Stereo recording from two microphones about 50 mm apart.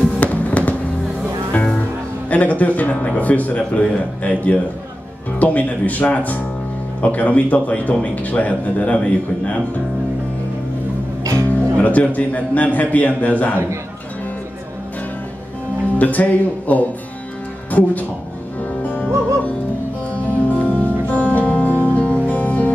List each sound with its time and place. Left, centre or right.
0.2 s fireworks: left
2.2 s a man's voice: left
11.4 s speech: left
16.0 s a man's voice: left
18.8 s music: left
21.6 s music: right
21.9 s music: left